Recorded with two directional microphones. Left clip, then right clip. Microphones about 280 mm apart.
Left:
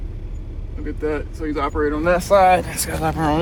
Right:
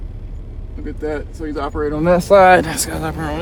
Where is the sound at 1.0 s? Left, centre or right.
Right.